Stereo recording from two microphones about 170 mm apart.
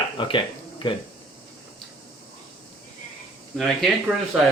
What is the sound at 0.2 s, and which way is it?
Speech, 30° left (ahead or behind).